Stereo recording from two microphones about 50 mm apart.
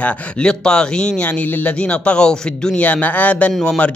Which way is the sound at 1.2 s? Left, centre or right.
Left.